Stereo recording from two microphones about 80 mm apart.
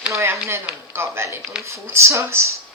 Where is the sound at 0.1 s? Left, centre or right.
Right.